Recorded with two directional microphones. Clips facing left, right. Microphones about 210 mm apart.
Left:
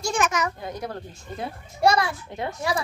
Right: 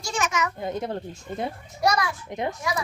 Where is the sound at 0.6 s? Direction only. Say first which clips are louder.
Right 4 dB; 25° right (ahead or behind).